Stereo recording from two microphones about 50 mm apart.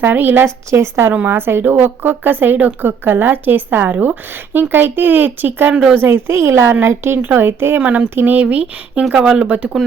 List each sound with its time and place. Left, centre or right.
0.0 s a woman's voice: right
0.4 s a woman's voice: right
1.3 s a woman's voice: right